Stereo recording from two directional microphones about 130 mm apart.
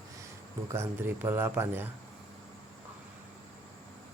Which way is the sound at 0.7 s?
20° right (ahead or behind).